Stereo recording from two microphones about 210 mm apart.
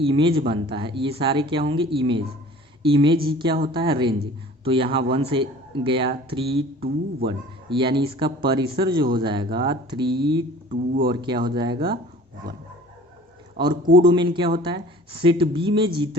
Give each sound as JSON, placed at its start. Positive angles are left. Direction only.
{"t": 0.0, "sound": "speech", "side_deg": -25}
{"t": 6.8, "sound": "speech", "side_deg": -50}
{"t": 7.7, "sound": "speech", "side_deg": -25}
{"t": 10.7, "sound": "speech", "side_deg": -40}
{"t": 11.1, "sound": "speech", "side_deg": -20}
{"t": 13.9, "sound": "speech", "side_deg": -20}